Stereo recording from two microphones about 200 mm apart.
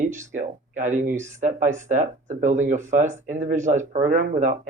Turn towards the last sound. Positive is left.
turn(degrees=-40)  # may be behind; listen again after turning